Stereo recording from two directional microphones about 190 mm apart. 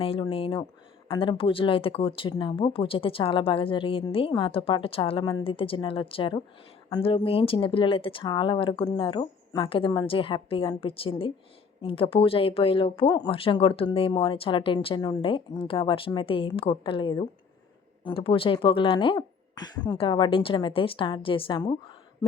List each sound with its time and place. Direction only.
0.0 s speech: 30° left (ahead or behind)